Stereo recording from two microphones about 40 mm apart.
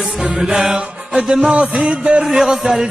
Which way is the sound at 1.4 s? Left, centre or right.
Right.